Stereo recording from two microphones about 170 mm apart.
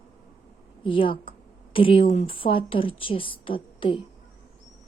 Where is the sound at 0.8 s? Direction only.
30° left (ahead or behind).